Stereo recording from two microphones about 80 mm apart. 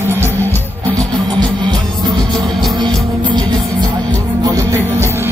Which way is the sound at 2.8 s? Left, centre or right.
Right.